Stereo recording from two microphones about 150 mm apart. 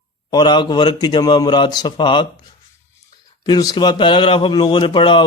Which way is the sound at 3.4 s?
30° left (ahead or behind).